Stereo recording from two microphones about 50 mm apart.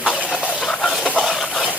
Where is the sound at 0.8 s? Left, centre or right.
Centre.